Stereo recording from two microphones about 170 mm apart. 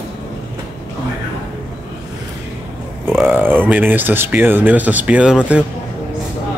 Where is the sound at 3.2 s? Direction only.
10° right (ahead or behind).